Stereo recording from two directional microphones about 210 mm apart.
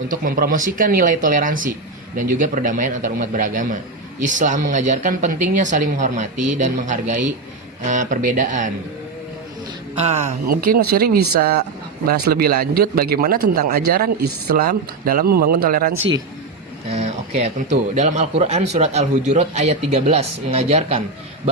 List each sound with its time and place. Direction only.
0.1 s speech: 40° right (ahead or behind)
10.0 s speech: 30° right (ahead or behind)
16.9 s a sound: 30° right (ahead or behind)
17.9 s speech: 35° right (ahead or behind)